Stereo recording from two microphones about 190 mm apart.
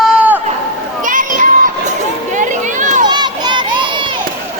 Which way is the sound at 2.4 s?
40° right (ahead or behind).